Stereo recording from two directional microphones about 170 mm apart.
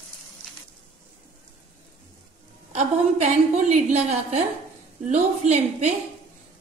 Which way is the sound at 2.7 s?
45° right (ahead or behind).